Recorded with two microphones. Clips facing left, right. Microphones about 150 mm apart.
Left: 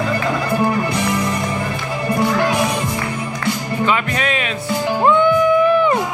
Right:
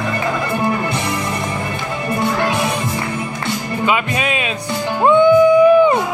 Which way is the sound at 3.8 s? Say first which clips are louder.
Even; 15° right (ahead or behind).